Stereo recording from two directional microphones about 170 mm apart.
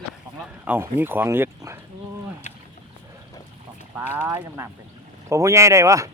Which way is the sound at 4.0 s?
10° right (ahead or behind).